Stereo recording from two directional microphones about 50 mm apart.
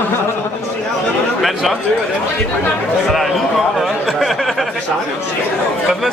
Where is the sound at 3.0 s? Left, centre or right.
Centre.